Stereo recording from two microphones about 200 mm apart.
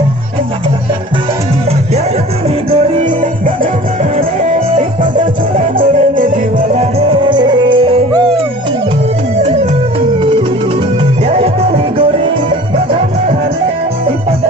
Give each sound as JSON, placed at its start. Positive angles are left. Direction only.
{"t": 3.0, "sound": "music", "side_deg": -40}
{"t": 6.1, "sound": "music", "side_deg": -40}
{"t": 7.0, "sound": "music", "side_deg": -25}
{"t": 9.4, "sound": "music", "side_deg": -30}
{"t": 11.2, "sound": "music", "side_deg": -30}